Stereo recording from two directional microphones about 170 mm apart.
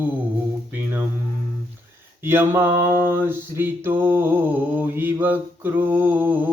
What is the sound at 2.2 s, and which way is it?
Mantra, 15° right (ahead or behind).